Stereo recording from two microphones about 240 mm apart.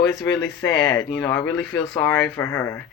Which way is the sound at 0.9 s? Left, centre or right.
Centre.